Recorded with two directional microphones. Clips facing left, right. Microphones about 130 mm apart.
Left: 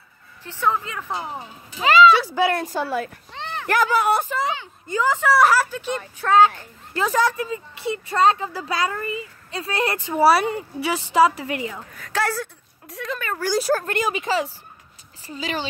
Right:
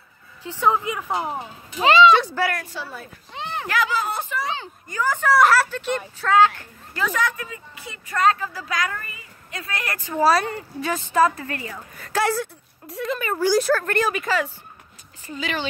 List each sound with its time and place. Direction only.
0.4 s a woman's voice: 15° right (ahead or behind)
1.8 s speech: 30° right (ahead or behind)
2.3 s a woman's voice: 25° left (ahead or behind)
2.6 s speech: 45° left (ahead or behind)
4.0 s speech: 65° left (ahead or behind)
4.8 s speech: 20° left (ahead or behind)
6.2 s a woman's voice: 20° left (ahead or behind)
7.0 s a woman's voice: 35° left (ahead or behind); by 11.8 s 15° left (ahead or behind)
11.9 s a woman's voice: 5° right (ahead or behind)
13.8 s a woman's voice: 20° left (ahead or behind); by 15.6 s 35° left (ahead or behind)